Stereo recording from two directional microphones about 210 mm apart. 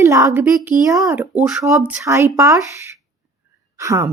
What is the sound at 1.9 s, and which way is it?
Speech, 15° right (ahead or behind).